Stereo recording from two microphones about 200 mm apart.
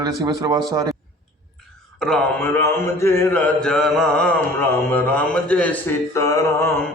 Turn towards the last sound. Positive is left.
turn(degrees=15)  # may be behind; listen again after turning